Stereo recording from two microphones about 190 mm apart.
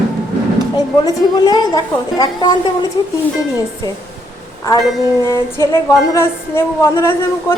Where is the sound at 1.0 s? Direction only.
20° left (ahead or behind).